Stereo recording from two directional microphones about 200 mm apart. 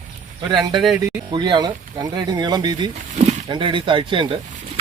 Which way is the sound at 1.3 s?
20° right (ahead or behind).